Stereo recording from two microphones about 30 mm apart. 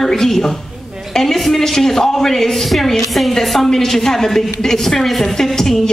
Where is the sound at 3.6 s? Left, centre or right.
Centre.